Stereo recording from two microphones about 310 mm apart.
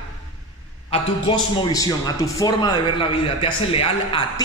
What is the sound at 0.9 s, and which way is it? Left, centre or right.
A man's voice, centre.